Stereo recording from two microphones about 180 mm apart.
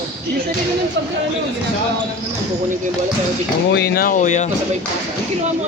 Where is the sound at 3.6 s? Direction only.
65° left (ahead or behind); by 4.5 s 40° left (ahead or behind).